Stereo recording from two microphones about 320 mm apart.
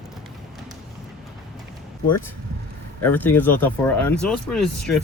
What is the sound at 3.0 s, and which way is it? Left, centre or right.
Speech, centre.